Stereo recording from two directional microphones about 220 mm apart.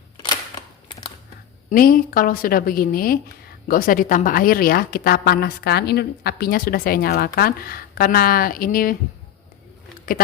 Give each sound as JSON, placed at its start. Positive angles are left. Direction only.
{"t": 0.2, "sound": "camera", "side_deg": 20}
{"t": 1.7, "sound": "a woman's voice", "side_deg": 40}
{"t": 10.1, "sound": "a woman's voice", "side_deg": 40}